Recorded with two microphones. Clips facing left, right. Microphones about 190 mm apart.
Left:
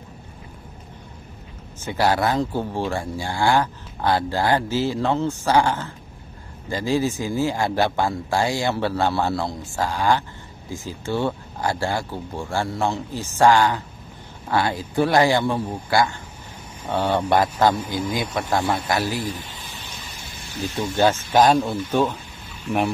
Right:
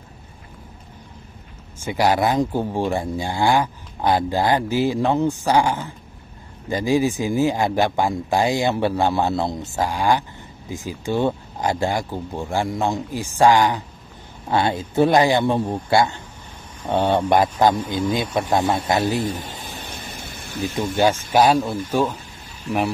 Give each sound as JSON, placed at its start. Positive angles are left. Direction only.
{"t": 1.8, "sound": "speech", "side_deg": -15}
{"t": 19.2, "sound": "a sound", "side_deg": -45}
{"t": 21.3, "sound": "speech", "side_deg": -10}